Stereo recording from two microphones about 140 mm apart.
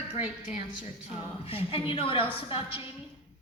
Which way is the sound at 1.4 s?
40° left (ahead or behind).